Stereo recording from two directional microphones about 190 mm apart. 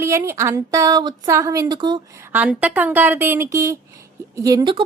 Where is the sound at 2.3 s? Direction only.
5° right (ahead or behind).